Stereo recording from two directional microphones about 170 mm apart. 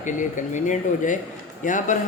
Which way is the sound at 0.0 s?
45° left (ahead or behind).